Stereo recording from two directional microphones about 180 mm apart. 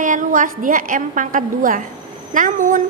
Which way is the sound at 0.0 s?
45° right (ahead or behind).